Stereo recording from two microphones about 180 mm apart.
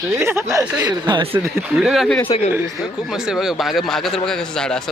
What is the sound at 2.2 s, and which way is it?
Speech, 35° left (ahead or behind).